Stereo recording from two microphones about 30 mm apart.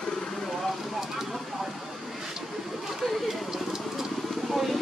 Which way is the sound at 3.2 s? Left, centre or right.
Centre.